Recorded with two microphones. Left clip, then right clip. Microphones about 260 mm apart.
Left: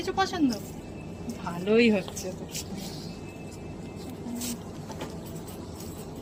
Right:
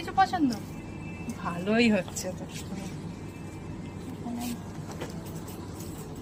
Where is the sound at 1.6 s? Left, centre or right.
Right.